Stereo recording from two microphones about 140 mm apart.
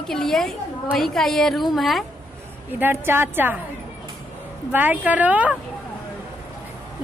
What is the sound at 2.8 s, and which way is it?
Speech, 15° right (ahead or behind).